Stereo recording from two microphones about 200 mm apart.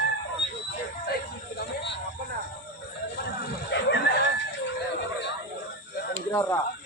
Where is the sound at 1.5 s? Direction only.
55° left (ahead or behind).